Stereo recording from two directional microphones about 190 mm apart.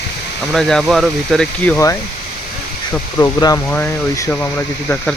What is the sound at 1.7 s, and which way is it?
Speech, 15° left (ahead or behind).